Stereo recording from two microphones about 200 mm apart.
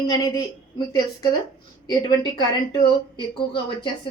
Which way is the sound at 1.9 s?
25° left (ahead or behind).